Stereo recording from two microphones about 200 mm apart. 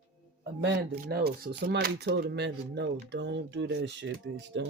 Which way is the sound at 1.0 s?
50° right (ahead or behind).